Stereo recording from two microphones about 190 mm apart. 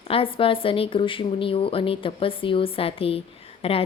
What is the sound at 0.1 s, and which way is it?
Speech, 30° left (ahead or behind).